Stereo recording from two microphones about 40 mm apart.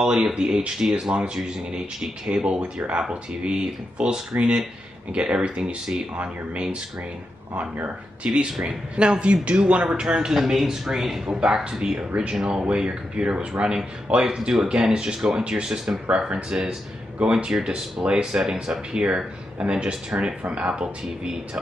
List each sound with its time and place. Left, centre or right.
0.2 s speech: right
8.3 s speech: right
9.8 s speech: centre
11.3 s speech: right
14.5 s speech: centre
15.1 s speech: centre
20.4 s speech: right